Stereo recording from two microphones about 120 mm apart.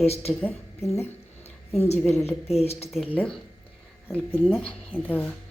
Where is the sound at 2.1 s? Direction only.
60° left (ahead or behind).